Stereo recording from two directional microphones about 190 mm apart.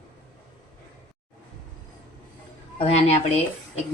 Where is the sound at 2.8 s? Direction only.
35° left (ahead or behind).